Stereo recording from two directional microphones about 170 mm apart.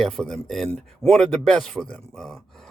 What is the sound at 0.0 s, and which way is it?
Speech, 5° left (ahead or behind).